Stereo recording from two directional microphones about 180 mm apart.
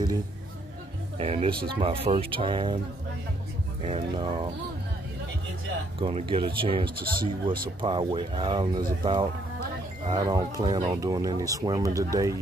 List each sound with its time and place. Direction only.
1.1 s speech: 35° right (ahead or behind)
3.8 s speech: 30° right (ahead or behind)
5.9 s speech: 30° right (ahead or behind)